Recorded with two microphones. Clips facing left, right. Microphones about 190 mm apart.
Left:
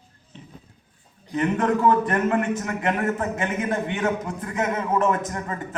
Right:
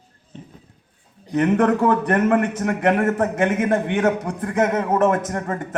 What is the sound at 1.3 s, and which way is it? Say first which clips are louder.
A man's voice: right 5 dB; 65° right (ahead or behind).